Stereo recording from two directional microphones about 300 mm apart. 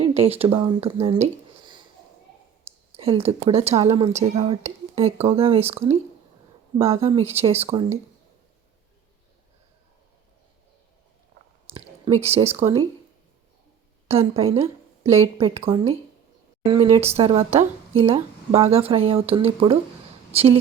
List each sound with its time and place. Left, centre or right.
0.0 s speech: centre
2.9 s speech: centre
11.6 s a sound: centre
12.2 s speech: right
14.1 s speech: centre